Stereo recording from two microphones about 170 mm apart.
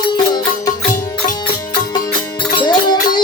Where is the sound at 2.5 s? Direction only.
25° left (ahead or behind).